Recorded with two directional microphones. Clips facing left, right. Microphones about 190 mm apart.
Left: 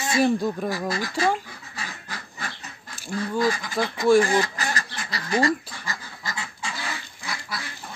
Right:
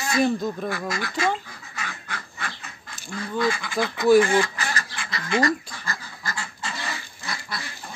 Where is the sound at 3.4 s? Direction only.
40° left (ahead or behind).